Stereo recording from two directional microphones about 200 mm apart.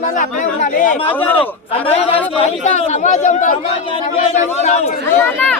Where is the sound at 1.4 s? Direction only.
30° left (ahead or behind).